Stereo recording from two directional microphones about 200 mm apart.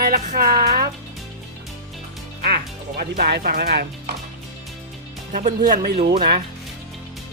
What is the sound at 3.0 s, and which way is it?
Speech, 50° right (ahead or behind).